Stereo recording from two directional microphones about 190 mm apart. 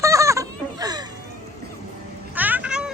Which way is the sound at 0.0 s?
15° right (ahead or behind).